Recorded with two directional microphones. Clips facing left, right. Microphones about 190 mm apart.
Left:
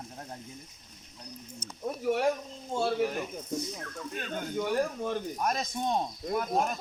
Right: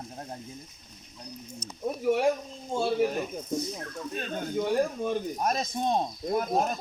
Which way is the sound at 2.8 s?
20° right (ahead or behind).